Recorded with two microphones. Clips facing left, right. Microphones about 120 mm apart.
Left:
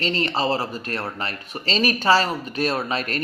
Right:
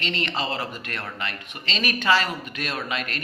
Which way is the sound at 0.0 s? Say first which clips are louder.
Left 5 dB; 35° left (ahead or behind).